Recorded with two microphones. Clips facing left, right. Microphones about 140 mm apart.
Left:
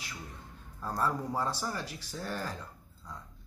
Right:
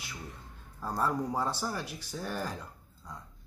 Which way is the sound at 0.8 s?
Centre (ahead or behind).